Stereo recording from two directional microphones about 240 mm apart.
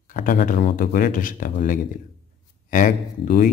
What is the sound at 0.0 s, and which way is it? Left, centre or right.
A man's voice, left.